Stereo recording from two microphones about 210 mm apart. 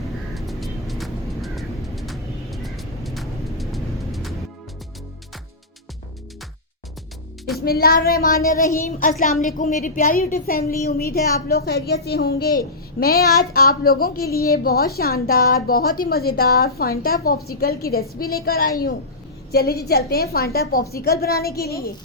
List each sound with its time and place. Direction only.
0.3 s vehicle: centre (ahead or behind)
7.6 s a woman's voice: 45° left (ahead or behind)